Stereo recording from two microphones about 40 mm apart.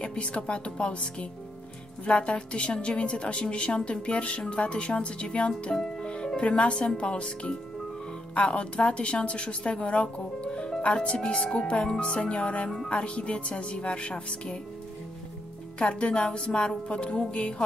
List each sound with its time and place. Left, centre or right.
0.0 s a woman's voice: left
5.7 s speech: centre
6.0 s music: left
7.0 s a woman's voice: left
15.8 s a woman's voice: left